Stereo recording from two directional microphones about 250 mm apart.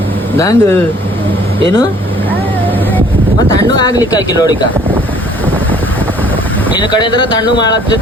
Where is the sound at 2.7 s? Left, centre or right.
Centre.